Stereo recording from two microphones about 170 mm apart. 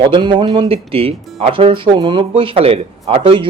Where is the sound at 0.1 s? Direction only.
30° right (ahead or behind).